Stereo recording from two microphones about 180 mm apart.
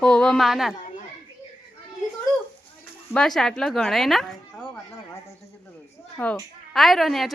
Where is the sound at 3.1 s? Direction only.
5° left (ahead or behind).